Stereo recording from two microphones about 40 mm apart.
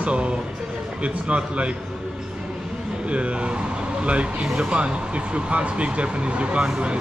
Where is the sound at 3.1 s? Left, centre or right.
Right.